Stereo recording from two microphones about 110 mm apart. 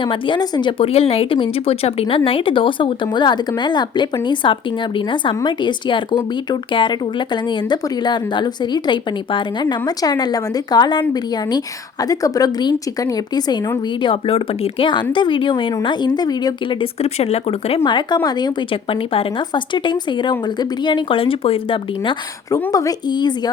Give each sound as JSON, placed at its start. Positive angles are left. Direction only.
{"t": 0.0, "sound": "speech", "side_deg": 50}
{"t": 0.8, "sound": "a woman's voice", "side_deg": 65}
{"t": 14.0, "sound": "a woman's voice", "side_deg": 55}
{"t": 16.8, "sound": "speech", "side_deg": 70}
{"t": 17.8, "sound": "speech", "side_deg": 45}
{"t": 22.7, "sound": "a woman's voice", "side_deg": 35}